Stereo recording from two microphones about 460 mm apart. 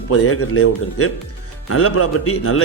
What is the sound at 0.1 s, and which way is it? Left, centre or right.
Speech, left.